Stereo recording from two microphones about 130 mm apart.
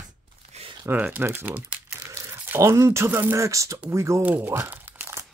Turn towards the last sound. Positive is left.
turn(degrees=-20)  # may be behind; listen again after turning